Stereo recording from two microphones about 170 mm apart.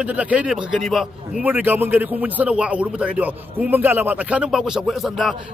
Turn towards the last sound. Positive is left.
turn(degrees=0)  # may be behind; listen again after turning